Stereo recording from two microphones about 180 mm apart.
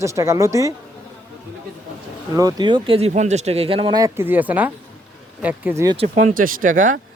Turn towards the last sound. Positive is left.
turn(degrees=-50)  # may be behind; listen again after turning